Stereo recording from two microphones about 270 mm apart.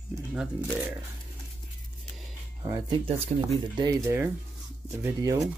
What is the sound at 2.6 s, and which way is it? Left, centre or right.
Speech, centre.